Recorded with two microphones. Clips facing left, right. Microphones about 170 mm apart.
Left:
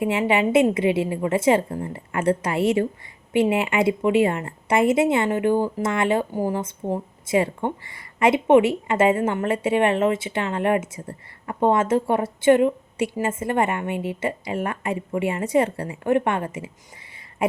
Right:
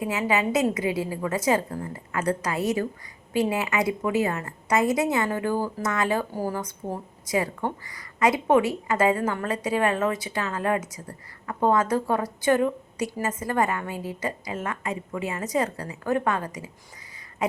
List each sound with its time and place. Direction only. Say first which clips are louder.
0.0 s a woman's voice: left 4 dB; 25° left (ahead or behind)